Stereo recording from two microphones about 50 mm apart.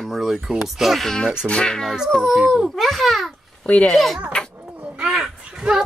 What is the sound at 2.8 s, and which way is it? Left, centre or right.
Speech, centre.